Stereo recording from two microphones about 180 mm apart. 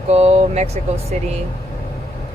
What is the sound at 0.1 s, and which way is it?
Speech, 35° right (ahead or behind).